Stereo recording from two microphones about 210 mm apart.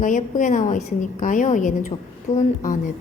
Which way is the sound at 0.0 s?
35° left (ahead or behind).